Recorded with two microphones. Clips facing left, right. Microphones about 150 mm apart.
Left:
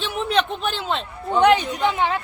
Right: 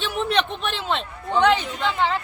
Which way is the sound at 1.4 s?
15° left (ahead or behind).